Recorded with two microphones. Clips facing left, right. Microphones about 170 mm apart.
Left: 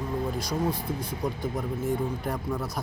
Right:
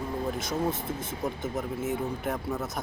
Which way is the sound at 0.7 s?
25° right (ahead or behind).